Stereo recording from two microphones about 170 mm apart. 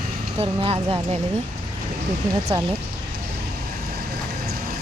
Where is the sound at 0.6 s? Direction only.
30° right (ahead or behind).